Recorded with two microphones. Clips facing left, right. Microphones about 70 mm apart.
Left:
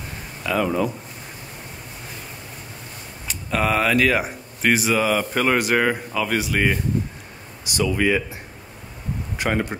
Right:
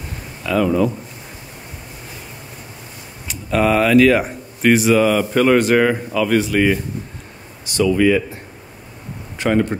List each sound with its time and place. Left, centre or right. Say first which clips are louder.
0.5 s speech: right 5 dB; centre
3.3 s speech: right 5 dB; centre
9.4 s speech: right 6 dB; centre